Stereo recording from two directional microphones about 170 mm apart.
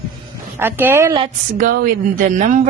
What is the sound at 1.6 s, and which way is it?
Speech, 60° right (ahead or behind).